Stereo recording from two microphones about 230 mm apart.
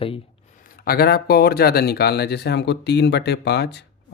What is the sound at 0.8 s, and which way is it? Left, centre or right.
Speech, left.